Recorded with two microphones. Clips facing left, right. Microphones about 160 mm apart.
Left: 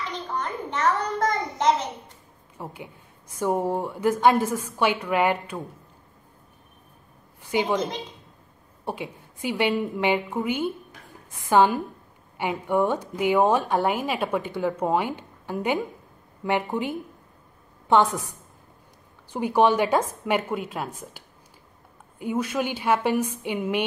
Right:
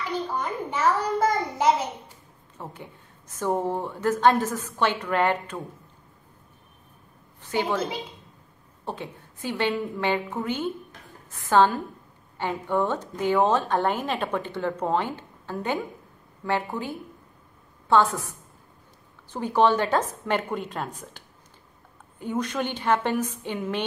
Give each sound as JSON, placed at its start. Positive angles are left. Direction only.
{"t": 0.1, "sound": "a sound", "side_deg": -5}
{"t": 2.5, "sound": "a woman's voice", "side_deg": 10}
{"t": 7.5, "sound": "a woman's voice", "side_deg": 15}
{"t": 8.8, "sound": "a woman's voice", "side_deg": 10}
{"t": 19.3, "sound": "a woman's voice", "side_deg": 10}
{"t": 22.2, "sound": "a woman's voice", "side_deg": 10}